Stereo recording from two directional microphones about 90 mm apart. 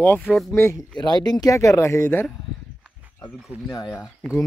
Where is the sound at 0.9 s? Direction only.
50° left (ahead or behind); by 2.2 s 30° left (ahead or behind).